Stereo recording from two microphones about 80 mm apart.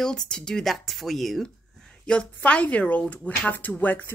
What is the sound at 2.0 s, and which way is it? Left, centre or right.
Speech, centre.